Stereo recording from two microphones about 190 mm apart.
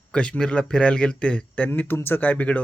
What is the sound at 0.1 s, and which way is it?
Speech, 5° left (ahead or behind).